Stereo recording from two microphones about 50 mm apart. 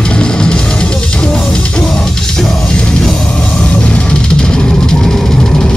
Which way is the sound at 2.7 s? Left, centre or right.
Centre.